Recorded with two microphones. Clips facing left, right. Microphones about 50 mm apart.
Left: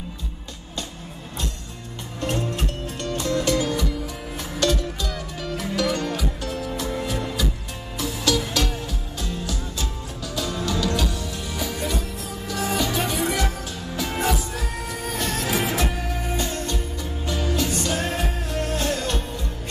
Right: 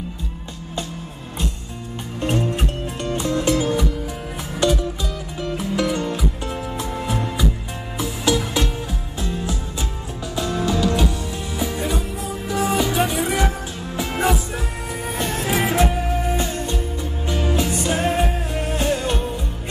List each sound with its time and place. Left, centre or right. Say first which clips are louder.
2.1 s music: right 4 dB; right
8.5 s music: right 2 dB; right